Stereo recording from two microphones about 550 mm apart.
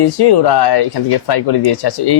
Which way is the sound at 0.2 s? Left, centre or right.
Left.